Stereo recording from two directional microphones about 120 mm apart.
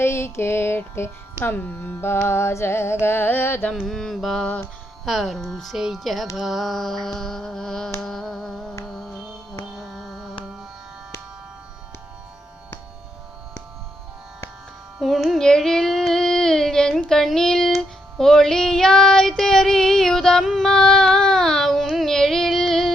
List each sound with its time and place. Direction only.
0.0 s music: 20° left (ahead or behind)
3.7 s mantra: 5° left (ahead or behind)
9.7 s carnatic music: centre (ahead or behind)
14.9 s child singing: centre (ahead or behind)